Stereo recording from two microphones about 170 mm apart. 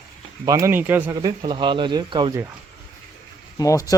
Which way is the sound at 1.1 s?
25° right (ahead or behind).